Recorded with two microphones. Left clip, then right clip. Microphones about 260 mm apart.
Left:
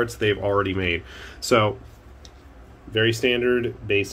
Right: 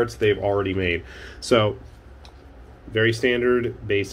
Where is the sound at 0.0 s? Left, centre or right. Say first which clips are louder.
Right 2 dB; centre.